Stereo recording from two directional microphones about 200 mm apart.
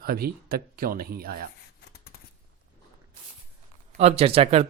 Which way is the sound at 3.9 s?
30° right (ahead or behind).